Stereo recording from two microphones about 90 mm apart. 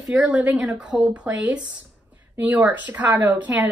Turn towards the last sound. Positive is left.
turn(degrees=-15)  # may be behind; listen again after turning